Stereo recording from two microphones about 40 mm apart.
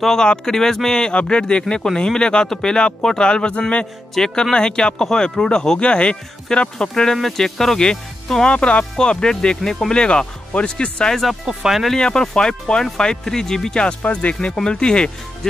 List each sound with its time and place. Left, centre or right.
0.0 s speech: centre
6.9 s speech: centre
8.5 s speech: left
10.0 s speech: left
11.4 s speech: centre
12.0 s speech: centre
14.0 s speech: left
14.4 s speech: left